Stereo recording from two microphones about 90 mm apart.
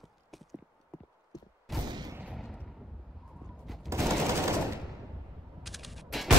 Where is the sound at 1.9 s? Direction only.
55° right (ahead or behind).